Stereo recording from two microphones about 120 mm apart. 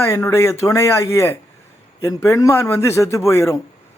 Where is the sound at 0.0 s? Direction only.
20° left (ahead or behind).